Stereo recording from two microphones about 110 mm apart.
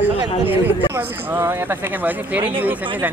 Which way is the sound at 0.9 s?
20° right (ahead or behind).